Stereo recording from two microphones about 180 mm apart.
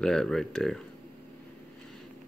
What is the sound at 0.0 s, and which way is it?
Speech, 5° left (ahead or behind).